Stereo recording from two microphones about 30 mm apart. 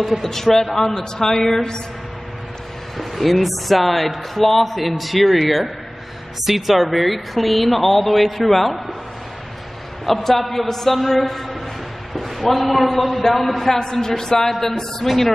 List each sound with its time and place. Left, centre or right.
0.2 s a woman's voice: centre
3.0 s speech: centre
10.0 s a man's voice: centre
13.7 s a woman's voice: centre
15.1 s speech: centre